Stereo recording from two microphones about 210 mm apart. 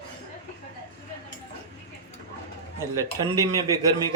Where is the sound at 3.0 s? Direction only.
15° right (ahead or behind).